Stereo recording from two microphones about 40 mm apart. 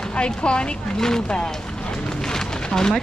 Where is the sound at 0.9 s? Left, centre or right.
Centre.